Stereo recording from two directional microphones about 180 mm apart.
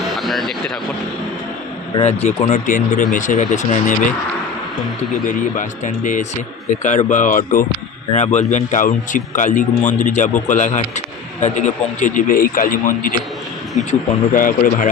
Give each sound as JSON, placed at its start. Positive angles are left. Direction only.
{"t": 0.2, "sound": "a sound", "side_deg": 0}
{"t": 2.0, "sound": "a man's voice", "side_deg": 35}
{"t": 5.2, "sound": "a man's voice", "side_deg": 45}
{"t": 13.7, "sound": "a man's voice", "side_deg": 40}